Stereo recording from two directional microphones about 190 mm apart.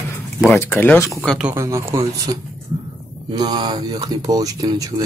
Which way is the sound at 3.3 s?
20° right (ahead or behind).